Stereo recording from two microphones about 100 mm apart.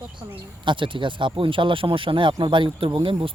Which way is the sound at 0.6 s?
55° right (ahead or behind).